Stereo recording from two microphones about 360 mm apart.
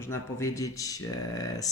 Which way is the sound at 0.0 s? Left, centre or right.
Centre.